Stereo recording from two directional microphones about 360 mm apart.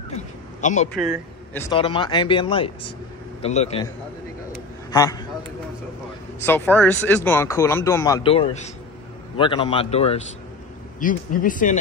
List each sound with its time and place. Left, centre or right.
0.1 s a sound: centre
0.9 s a man's voice: centre
1.7 s speech: centre
4.9 s speech: centre
6.4 s speech: centre; by 11.8 s left